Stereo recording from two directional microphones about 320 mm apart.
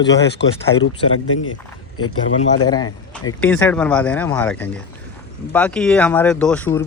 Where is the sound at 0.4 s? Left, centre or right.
Left.